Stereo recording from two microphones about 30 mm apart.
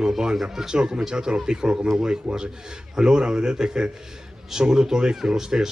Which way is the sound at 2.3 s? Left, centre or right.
Right.